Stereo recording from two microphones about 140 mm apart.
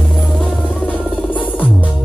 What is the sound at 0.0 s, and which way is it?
Music, centre (ahead or behind).